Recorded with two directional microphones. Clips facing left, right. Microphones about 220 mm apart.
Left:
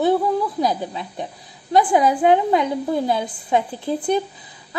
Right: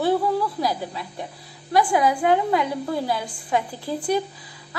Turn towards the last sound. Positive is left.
turn(degrees=20)  # may be behind; listen again after turning